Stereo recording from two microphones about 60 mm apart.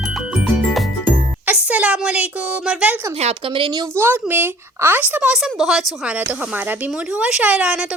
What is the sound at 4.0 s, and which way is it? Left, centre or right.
Speech, right.